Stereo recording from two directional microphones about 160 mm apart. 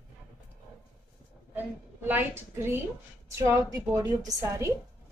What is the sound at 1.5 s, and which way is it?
A woman's voice, 10° right (ahead or behind).